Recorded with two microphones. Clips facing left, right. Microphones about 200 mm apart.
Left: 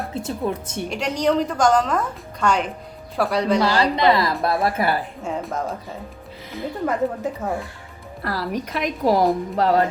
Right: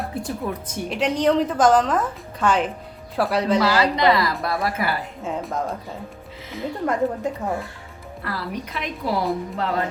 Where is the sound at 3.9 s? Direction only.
25° left (ahead or behind).